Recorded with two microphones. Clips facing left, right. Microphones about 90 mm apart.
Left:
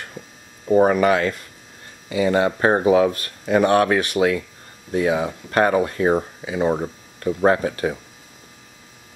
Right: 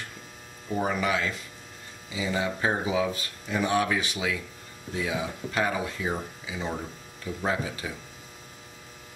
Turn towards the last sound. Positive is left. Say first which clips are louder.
# left 11 dB
turn(degrees=60)  # may be behind; listen again after turning